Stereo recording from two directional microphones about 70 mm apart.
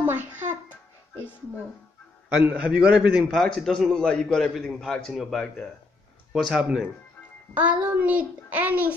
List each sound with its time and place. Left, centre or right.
0.0 s music: right
2.2 s a man's voice: right
3.3 s a man's voice: centre
7.5 s speech: centre